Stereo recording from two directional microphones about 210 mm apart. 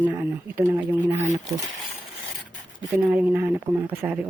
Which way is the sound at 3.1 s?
10° right (ahead or behind).